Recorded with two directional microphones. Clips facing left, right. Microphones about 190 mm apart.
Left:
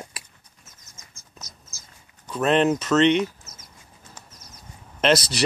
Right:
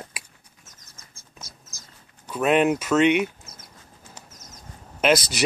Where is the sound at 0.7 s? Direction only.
90° right.